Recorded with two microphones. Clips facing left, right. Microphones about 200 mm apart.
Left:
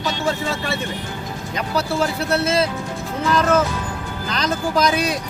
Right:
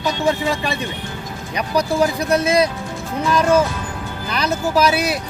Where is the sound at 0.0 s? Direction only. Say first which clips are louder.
Right 3 dB; 15° right (ahead or behind).